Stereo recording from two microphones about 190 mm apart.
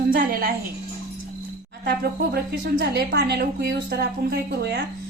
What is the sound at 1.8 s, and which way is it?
Speech, 55° right (ahead or behind).